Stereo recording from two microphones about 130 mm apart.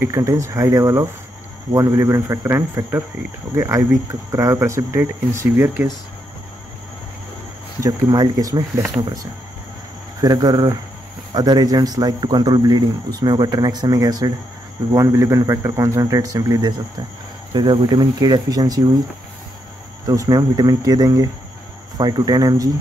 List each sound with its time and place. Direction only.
0.0 s speech: 25° right (ahead or behind)
7.8 s speech: 30° right (ahead or behind)
10.2 s speech: 30° right (ahead or behind)
20.1 s speech: 25° right (ahead or behind)